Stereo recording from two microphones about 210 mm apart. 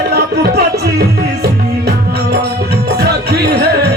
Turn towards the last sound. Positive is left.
turn(degrees=-50)  # may be behind; listen again after turning